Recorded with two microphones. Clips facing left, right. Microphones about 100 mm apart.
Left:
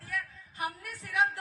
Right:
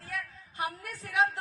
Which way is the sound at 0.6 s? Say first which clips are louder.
Right 1 dB; 20° right (ahead or behind).